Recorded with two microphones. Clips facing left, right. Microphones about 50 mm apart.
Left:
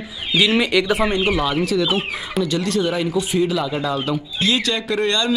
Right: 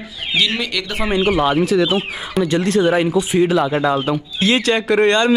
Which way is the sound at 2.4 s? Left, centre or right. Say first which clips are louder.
Right 6 dB; right.